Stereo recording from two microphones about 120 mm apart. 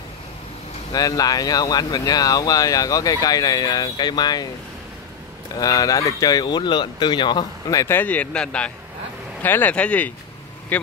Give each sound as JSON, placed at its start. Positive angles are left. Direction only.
{"t": 0.9, "sound": "speech", "side_deg": 30}
{"t": 5.6, "sound": "speech", "side_deg": 30}
{"t": 7.8, "sound": "speech", "side_deg": 15}